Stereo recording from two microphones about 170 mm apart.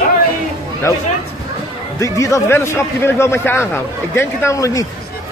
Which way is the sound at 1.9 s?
20° left (ahead or behind).